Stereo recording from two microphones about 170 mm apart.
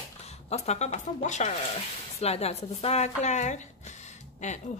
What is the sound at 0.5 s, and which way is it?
A woman's voice, 40° left (ahead or behind).